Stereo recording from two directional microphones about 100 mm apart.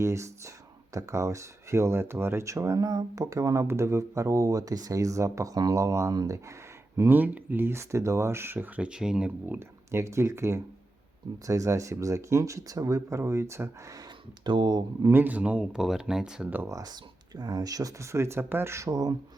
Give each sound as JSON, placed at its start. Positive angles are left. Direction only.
{"t": 0.0, "sound": "speech", "side_deg": -30}
{"t": 6.9, "sound": "speech", "side_deg": -25}
{"t": 9.6, "sound": "speech", "side_deg": -30}
{"t": 14.4, "sound": "speech", "side_deg": -50}
{"t": 15.0, "sound": "speech", "side_deg": -20}
{"t": 16.6, "sound": "speech", "side_deg": -35}